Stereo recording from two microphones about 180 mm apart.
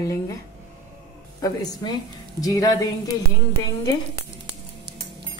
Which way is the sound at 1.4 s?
20° left (ahead or behind).